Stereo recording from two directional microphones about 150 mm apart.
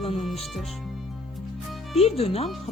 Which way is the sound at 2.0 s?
40° left (ahead or behind).